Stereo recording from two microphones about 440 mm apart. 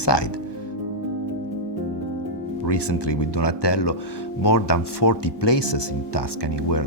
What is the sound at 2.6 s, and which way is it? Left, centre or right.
Speech, left.